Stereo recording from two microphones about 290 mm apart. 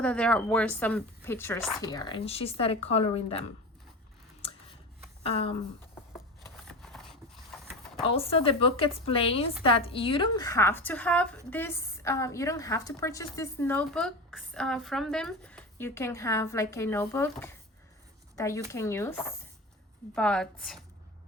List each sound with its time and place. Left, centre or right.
0.0 s a woman's voice: centre
5.2 s speech: centre
6.7 s a sound: centre
8.0 s a woman's voice: centre